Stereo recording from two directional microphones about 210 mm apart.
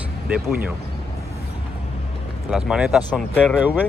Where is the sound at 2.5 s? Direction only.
5° right (ahead or behind).